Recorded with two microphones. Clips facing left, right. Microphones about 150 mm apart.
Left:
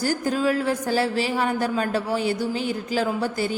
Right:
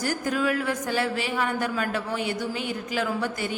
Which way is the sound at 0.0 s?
30° left (ahead or behind).